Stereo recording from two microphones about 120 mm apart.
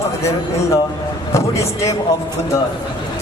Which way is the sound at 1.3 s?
25° left (ahead or behind).